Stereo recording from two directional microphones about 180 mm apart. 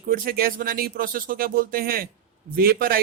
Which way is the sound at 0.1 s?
55° right (ahead or behind).